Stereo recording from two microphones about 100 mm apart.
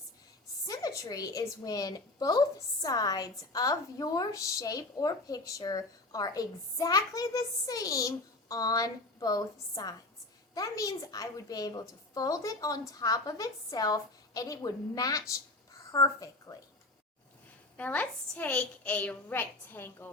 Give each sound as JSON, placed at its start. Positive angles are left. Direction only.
{"t": 0.7, "sound": "a woman's voice", "side_deg": 35}
{"t": 17.7, "sound": "a woman's voice", "side_deg": 15}